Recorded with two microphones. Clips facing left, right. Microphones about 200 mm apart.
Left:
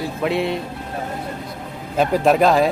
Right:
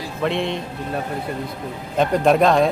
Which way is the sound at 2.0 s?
5° left (ahead or behind).